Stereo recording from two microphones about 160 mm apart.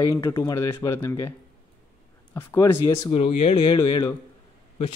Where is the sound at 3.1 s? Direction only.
40° left (ahead or behind).